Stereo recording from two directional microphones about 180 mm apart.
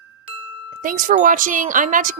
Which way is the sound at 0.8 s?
50° right (ahead or behind).